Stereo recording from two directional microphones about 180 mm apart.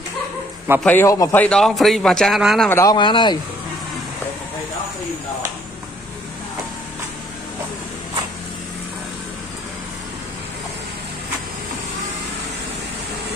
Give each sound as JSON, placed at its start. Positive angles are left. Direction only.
{"t": 0.7, "sound": "a man's voice", "side_deg": 10}
{"t": 2.7, "sound": "speech", "side_deg": 20}